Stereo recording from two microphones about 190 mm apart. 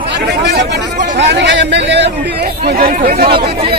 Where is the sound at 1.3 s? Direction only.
70° right (ahead or behind).